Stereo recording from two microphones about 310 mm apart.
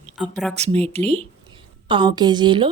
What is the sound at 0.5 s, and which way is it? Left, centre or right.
Speech, centre.